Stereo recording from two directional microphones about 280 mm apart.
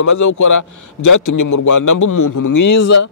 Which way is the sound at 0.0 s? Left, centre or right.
Left.